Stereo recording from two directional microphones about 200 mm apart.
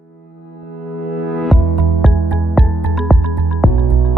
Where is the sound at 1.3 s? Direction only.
Centre (ahead or behind).